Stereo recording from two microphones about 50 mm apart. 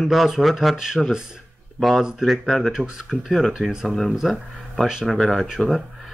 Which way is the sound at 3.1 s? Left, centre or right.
Centre.